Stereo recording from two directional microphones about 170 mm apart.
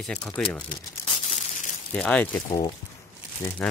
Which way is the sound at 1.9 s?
10° left (ahead or behind).